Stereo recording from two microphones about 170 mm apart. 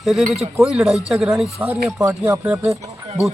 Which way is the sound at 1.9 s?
20° right (ahead or behind).